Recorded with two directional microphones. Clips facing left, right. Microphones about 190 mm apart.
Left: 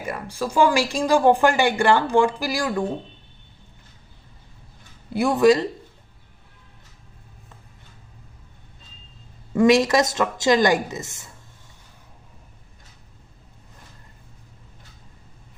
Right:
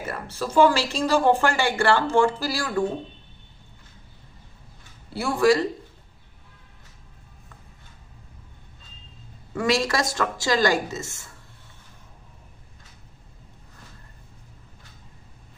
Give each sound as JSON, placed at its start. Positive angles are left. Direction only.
{"t": 0.0, "sound": "speech", "side_deg": 10}
{"t": 5.1, "sound": "a woman's voice", "side_deg": 20}
{"t": 9.5, "sound": "a woman's voice", "side_deg": 20}